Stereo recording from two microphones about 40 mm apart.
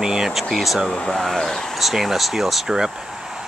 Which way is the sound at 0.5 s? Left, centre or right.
Centre.